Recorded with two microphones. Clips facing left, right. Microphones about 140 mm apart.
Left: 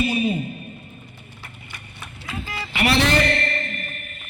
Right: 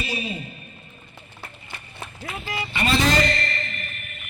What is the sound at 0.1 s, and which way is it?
Speech, 55° left (ahead or behind).